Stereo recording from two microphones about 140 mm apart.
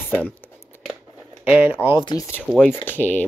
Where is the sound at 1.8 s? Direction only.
35° left (ahead or behind).